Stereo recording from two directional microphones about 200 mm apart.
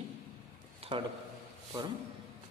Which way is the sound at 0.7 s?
30° right (ahead or behind).